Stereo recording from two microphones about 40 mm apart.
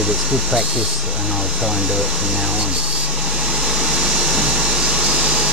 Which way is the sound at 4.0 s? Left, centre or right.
Centre.